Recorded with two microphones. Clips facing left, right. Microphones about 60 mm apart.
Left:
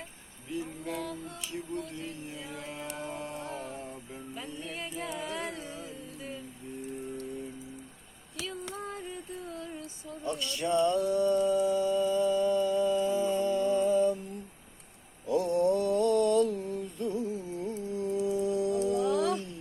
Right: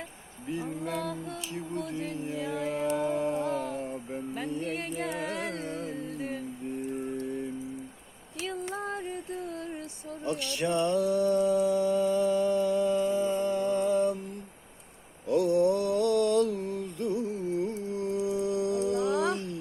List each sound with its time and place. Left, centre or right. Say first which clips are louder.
2.2 s music: right 9 dB; right
3.5 s a sound: right 7 dB; right
3.8 s music: right 7 dB; right
8.4 s music: right 5 dB; right
10.1 s a sound: right 2 dB; right
13.0 s music: right 1 dB; right
15.3 s mantra: right 2 dB; right